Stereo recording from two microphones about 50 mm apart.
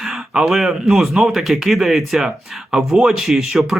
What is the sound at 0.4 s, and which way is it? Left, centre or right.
Speech, centre.